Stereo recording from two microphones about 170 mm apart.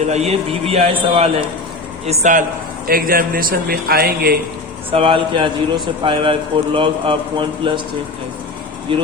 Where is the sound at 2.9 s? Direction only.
60° right (ahead or behind).